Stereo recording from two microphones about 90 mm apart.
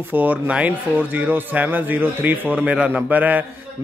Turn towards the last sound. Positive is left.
turn(degrees=-20)  # may be behind; listen again after turning